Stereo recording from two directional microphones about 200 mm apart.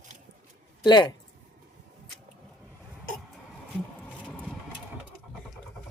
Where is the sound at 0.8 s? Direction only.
20° left (ahead or behind).